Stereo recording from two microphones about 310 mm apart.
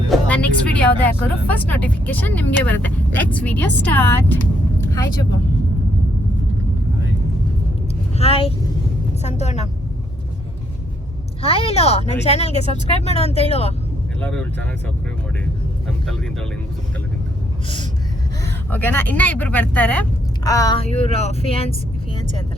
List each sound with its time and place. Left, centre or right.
0.1 s speech: centre
8.2 s speech: centre
11.4 s speech: centre
14.2 s speech: centre
18.4 s speech: centre